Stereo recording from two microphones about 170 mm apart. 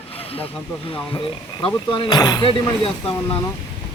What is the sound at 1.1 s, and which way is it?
Speech, 30° left (ahead or behind).